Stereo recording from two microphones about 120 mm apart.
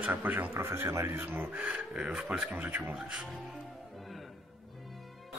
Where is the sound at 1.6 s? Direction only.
10° right (ahead or behind).